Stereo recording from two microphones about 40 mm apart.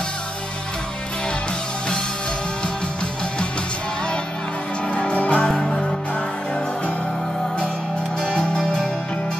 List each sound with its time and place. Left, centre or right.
4.9 s music: left
5.5 s music: centre
8.2 s music: left